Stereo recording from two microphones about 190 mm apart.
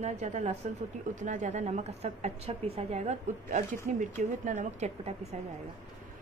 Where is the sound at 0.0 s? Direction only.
40° right (ahead or behind).